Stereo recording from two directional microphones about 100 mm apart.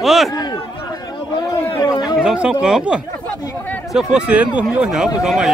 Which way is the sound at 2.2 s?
10° right (ahead or behind).